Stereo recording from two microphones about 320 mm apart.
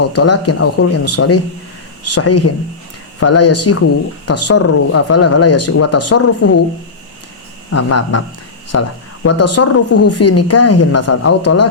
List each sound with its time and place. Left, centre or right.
0.0 s a woman's voice: left
7.7 s a woman's voice: left